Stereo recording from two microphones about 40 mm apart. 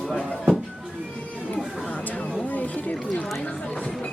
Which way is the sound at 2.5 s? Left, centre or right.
Left.